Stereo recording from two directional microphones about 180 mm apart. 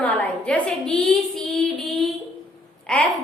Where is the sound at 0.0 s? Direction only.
10° left (ahead or behind).